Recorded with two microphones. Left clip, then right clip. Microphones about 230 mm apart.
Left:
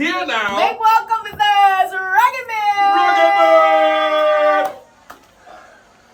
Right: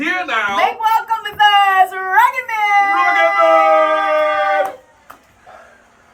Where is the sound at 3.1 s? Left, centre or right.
Centre.